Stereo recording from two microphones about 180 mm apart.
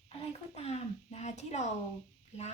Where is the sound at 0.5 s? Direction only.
35° left (ahead or behind).